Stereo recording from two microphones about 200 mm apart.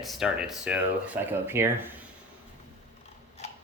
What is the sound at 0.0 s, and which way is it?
Speech, centre (ahead or behind).